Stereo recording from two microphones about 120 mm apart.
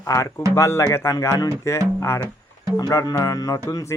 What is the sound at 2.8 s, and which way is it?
Music, 30° left (ahead or behind).